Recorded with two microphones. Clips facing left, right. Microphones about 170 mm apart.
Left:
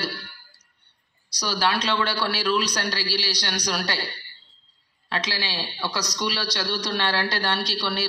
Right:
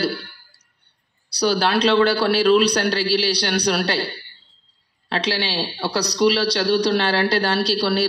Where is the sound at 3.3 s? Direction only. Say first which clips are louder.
Right 8 dB; 65° right (ahead or behind).